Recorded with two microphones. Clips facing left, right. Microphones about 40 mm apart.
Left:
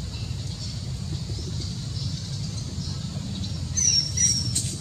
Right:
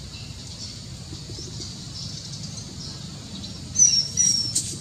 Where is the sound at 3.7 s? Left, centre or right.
Centre.